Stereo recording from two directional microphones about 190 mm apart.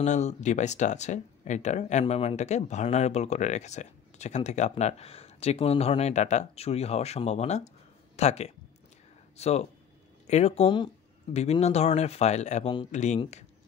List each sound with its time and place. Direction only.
0.0 s speech: 35° left (ahead or behind)